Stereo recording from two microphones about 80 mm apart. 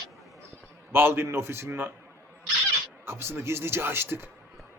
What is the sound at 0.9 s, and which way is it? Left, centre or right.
Speech, right.